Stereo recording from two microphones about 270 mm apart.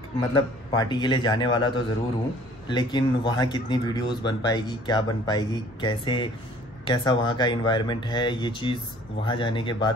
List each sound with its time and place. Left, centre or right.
0.2 s speech: centre
2.7 s speech: centre